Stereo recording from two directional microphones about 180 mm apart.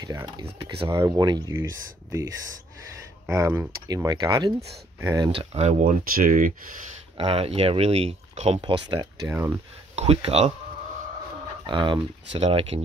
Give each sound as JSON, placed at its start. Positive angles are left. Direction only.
{"t": 0.0, "sound": "speech", "side_deg": -25}
{"t": 3.3, "sound": "speech", "side_deg": -15}
{"t": 5.3, "sound": "speech", "side_deg": -30}
{"t": 7.2, "sound": "speech", "side_deg": -30}
{"t": 9.9, "sound": "speech", "side_deg": -35}
{"t": 11.6, "sound": "speech", "side_deg": -25}